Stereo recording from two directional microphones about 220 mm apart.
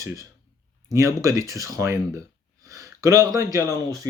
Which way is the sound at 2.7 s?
15° right (ahead or behind).